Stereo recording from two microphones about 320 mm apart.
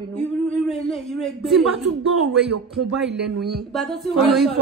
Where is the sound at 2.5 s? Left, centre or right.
Right.